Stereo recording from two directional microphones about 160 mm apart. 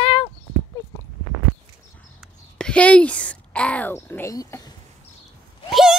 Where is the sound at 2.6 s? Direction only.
5° left (ahead or behind).